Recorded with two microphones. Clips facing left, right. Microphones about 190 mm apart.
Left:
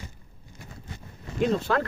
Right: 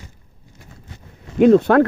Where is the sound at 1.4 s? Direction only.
60° right (ahead or behind).